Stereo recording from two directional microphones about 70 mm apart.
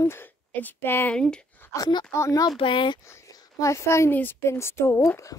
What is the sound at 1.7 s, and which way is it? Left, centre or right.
Speech, left.